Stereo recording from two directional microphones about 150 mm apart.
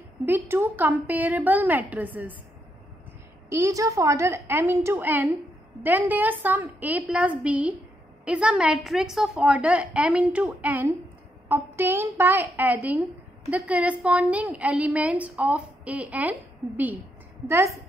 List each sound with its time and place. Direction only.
0.2 s a woman's voice: 15° right (ahead or behind)
3.4 s a woman's voice: 20° right (ahead or behind)